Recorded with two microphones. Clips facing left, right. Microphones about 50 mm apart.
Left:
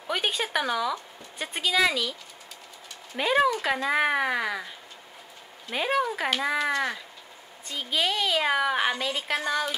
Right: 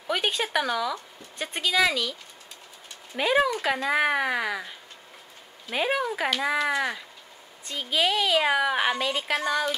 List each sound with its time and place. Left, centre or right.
0.0 s a woman's voice: centre
3.2 s a woman's voice: centre